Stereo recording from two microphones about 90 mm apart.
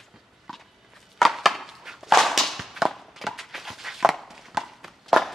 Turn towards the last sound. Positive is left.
turn(degrees=0)  # may be behind; listen again after turning